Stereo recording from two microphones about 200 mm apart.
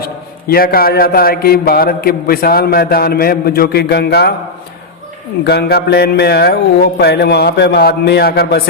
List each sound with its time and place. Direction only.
0.0 s a man's voice: 50° left (ahead or behind)
5.5 s a man's voice: 55° left (ahead or behind)